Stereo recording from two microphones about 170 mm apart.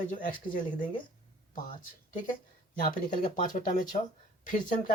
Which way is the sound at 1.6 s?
50° left (ahead or behind).